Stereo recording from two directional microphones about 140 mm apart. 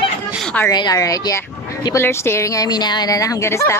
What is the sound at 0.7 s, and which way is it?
Speech, 30° left (ahead or behind).